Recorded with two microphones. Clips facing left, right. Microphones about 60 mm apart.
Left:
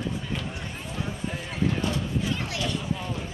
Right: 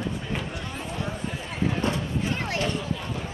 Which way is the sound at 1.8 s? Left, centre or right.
Right.